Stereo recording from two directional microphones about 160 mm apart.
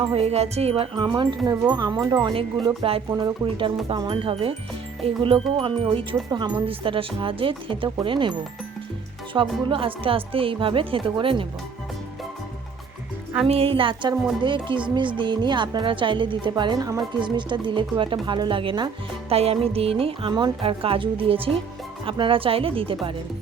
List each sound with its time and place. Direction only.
0.0 s speech: 40° right (ahead or behind)
3.1 s speech: 25° right (ahead or behind)
13.5 s speech: 35° right (ahead or behind)